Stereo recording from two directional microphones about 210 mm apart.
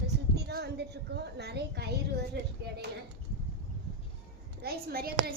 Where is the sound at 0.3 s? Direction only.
50° right (ahead or behind).